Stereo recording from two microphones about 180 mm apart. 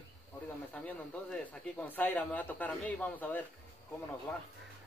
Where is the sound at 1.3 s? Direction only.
10° left (ahead or behind).